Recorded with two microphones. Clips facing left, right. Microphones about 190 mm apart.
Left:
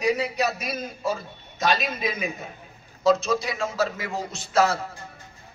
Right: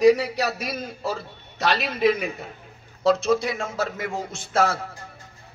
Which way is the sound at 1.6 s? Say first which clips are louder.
Right 1 dB; 65° right (ahead or behind).